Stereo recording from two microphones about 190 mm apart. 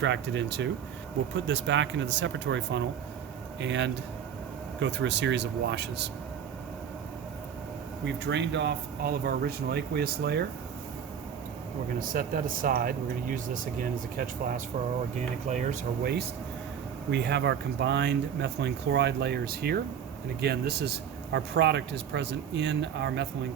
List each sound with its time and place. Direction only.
0.0 s speech: 70° right (ahead or behind)
8.0 s speech: 70° right (ahead or behind)
11.9 s speech: 45° right (ahead or behind)
17.1 s speech: 60° right (ahead or behind)